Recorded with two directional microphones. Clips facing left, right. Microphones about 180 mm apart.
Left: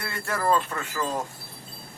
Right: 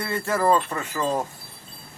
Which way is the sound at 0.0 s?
20° right (ahead or behind).